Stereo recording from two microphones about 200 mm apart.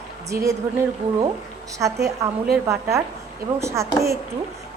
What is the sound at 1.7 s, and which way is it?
A woman's voice, 15° right (ahead or behind).